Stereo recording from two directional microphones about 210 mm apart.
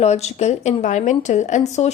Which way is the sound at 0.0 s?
30° left (ahead or behind).